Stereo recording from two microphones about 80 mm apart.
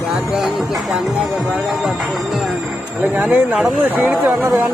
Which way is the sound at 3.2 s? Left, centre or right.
Centre.